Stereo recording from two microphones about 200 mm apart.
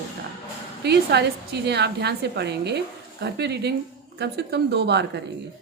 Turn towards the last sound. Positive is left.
turn(degrees=-55)  # may be behind; listen again after turning